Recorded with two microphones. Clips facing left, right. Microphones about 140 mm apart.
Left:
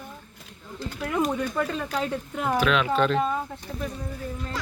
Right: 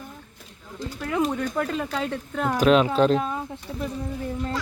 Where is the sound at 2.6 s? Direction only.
40° right (ahead or behind).